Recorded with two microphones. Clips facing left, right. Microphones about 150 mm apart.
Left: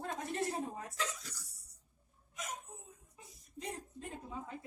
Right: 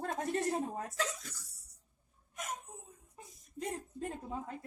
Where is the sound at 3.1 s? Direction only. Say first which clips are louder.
Right 5 dB; 50° right (ahead or behind).